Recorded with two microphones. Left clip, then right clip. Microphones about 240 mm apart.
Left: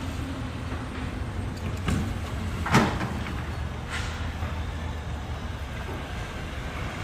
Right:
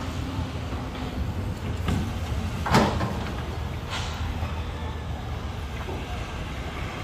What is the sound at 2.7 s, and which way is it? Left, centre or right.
Vehicle, right.